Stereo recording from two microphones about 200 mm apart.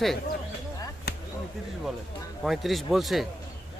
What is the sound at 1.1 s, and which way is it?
Chop, 50° left (ahead or behind).